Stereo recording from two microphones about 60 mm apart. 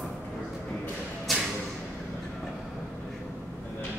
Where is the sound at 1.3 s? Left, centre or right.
Centre.